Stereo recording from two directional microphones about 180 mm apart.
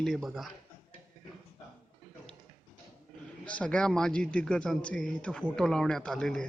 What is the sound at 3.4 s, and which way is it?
A man's voice, 5° left (ahead or behind).